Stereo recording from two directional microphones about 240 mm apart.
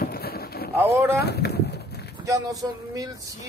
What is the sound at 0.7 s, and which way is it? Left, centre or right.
Speech, centre.